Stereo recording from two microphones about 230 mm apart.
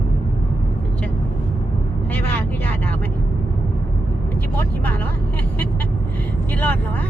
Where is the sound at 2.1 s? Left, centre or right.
Centre.